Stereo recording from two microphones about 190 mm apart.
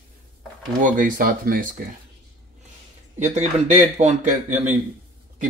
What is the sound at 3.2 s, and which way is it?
Speech, 35° right (ahead or behind).